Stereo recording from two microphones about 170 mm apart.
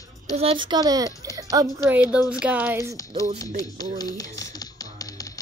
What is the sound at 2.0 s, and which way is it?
Speech, 5° right (ahead or behind).